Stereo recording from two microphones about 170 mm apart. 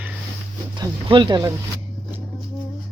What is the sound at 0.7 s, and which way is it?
Speech, 25° right (ahead or behind).